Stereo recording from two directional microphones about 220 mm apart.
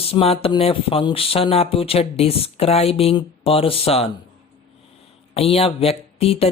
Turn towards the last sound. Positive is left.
turn(degrees=25)  # may be behind; listen again after turning